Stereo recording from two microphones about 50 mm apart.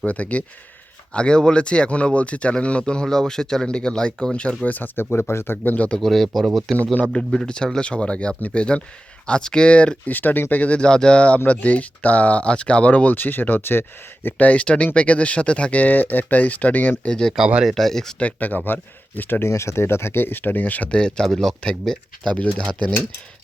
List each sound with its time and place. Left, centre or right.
0.0 s speech: left
1.1 s speech: centre
5.3 s speech: left
5.6 s speech: left
6.0 s speech: centre
7.1 s speech: centre
10.1 s speech: left
10.8 s speech: centre; by 13.8 s left
14.3 s speech: left
17.0 s speech: centre
17.7 s speech: centre
18.2 s speech: left
19.4 s speech: left
20.9 s speech: centre